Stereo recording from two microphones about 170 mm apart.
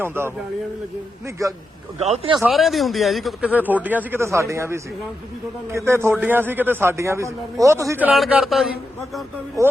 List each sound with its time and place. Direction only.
0.0 s speech: 15° right (ahead or behind)
2.0 s speech: 40° right (ahead or behind)
2.4 s speech: centre (ahead or behind)
9.6 s speech: 20° right (ahead or behind)